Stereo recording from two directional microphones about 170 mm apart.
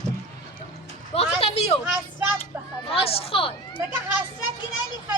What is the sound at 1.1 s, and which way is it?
Speech, 35° left (ahead or behind).